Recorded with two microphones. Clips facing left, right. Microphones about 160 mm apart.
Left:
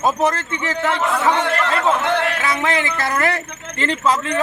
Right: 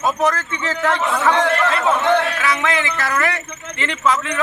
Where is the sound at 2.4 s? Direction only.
25° left (ahead or behind).